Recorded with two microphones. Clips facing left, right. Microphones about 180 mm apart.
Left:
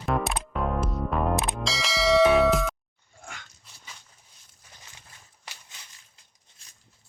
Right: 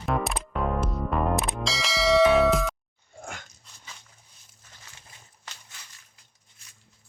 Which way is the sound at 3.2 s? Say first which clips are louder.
Right 5 dB; 45° right (ahead or behind).